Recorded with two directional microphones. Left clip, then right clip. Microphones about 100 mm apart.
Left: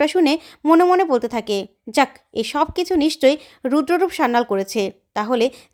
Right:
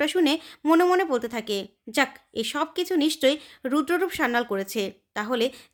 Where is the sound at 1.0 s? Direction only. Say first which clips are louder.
Left 7 dB; 55° left (ahead or behind).